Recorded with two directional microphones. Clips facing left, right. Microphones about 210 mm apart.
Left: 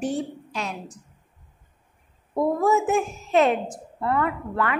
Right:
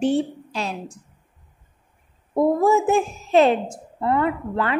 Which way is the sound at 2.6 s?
30° right (ahead or behind).